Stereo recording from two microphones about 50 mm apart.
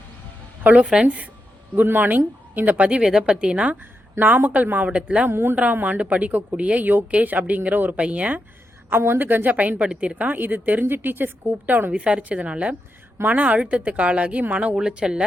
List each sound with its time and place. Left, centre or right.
0.6 s a woman's voice: right
1.7 s a woman's voice: right
3.0 s a woman's voice: centre
4.2 s a woman's voice: right
4.9 s a woman's voice: right
5.3 s speech: right
5.7 s a woman's voice: right
8.9 s a woman's voice: right
9.8 s a woman's voice: centre; by 11.9 s right
11.9 s a woman's voice: right